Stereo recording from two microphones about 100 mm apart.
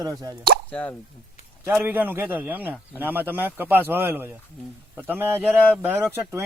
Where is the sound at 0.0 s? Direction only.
40° right (ahead or behind).